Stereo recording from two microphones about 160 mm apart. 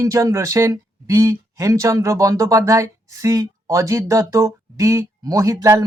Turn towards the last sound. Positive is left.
turn(degrees=-20)  # may be behind; listen again after turning